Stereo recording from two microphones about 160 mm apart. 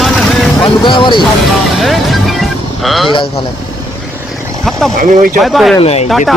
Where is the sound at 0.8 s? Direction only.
30° left (ahead or behind).